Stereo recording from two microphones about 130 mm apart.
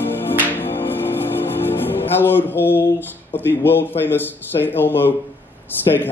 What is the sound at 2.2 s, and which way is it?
Speech, 15° left (ahead or behind).